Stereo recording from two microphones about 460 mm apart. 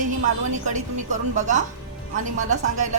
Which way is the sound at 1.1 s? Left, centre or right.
Centre.